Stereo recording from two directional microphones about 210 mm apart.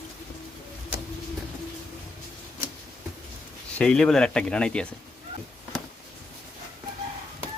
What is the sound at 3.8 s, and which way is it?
A man's voice, 5° left (ahead or behind).